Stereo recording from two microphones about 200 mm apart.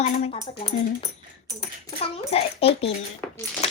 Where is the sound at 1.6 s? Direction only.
30° left (ahead or behind).